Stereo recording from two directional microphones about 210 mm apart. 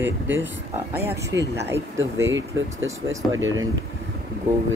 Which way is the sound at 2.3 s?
65° right (ahead or behind).